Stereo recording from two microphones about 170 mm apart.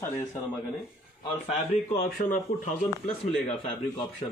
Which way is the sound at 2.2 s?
50° left (ahead or behind).